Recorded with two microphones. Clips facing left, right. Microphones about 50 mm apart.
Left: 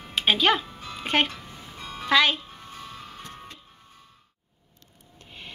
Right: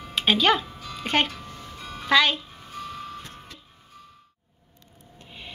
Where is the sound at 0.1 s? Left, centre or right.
Centre.